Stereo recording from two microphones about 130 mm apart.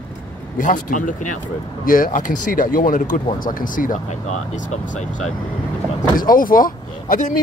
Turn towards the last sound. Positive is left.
turn(degrees=90)